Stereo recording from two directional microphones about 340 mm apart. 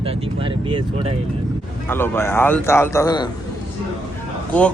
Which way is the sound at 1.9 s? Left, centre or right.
Centre.